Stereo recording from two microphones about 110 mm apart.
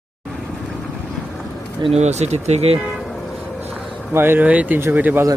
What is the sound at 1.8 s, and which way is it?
Speech, 80° right.